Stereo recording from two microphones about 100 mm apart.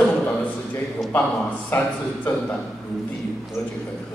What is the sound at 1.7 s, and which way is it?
Speech, 20° left (ahead or behind).